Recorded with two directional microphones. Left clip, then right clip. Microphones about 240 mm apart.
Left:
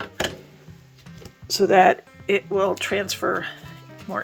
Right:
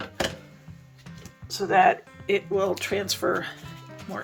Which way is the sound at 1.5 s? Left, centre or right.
Left.